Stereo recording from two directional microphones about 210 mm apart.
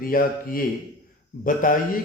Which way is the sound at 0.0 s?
45° left (ahead or behind).